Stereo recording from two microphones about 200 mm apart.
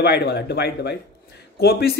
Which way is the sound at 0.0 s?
55° left (ahead or behind).